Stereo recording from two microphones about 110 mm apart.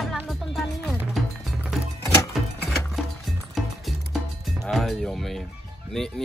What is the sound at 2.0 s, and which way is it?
Music, 30° left (ahead or behind).